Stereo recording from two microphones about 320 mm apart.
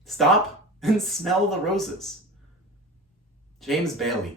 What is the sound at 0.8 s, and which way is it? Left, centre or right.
Speech, centre.